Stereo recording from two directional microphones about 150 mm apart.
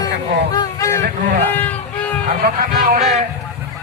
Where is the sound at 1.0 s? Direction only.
90° right.